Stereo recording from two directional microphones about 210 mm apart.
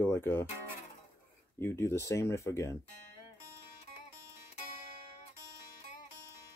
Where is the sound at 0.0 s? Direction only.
10° left (ahead or behind).